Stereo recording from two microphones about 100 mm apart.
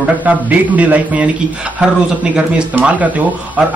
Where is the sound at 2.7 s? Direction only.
15° right (ahead or behind).